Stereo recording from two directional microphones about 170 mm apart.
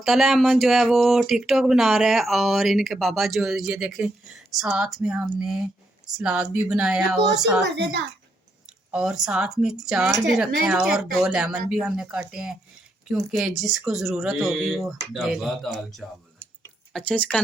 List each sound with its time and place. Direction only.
0.0 s speech: centre (ahead or behind)
7.6 s a woman's voice: 90° right
8.9 s speech: 5° right (ahead or behind)